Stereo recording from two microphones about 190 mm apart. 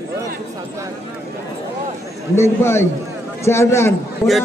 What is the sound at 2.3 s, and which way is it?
A man's voice, 15° left (ahead or behind).